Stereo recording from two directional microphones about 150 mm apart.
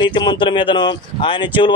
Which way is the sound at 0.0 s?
30° left (ahead or behind).